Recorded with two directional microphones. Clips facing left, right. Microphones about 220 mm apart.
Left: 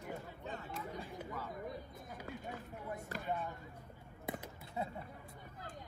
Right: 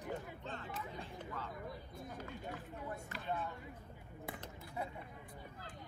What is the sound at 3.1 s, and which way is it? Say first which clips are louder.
Speech: left 4 dB; 40° left (ahead or behind).